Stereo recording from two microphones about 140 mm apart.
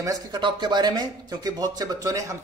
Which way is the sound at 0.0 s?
30° right (ahead or behind).